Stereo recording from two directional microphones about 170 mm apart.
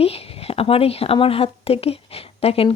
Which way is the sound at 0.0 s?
35° left (ahead or behind).